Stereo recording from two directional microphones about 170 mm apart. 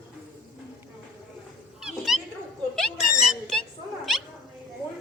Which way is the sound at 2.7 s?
5° left (ahead or behind).